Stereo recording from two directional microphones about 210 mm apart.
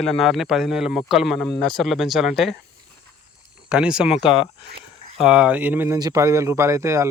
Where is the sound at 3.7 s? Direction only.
5° right (ahead or behind).